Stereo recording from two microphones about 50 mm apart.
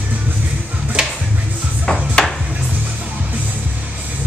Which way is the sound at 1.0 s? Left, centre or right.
Centre.